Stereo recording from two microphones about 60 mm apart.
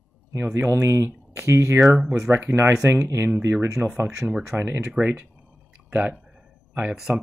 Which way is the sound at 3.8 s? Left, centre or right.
Left.